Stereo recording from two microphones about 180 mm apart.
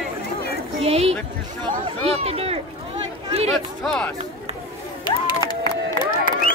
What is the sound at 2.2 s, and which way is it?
Speech, 35° right (ahead or behind).